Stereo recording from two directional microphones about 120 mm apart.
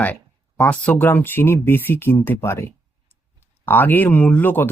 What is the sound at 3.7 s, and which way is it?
Speech, 15° left (ahead or behind).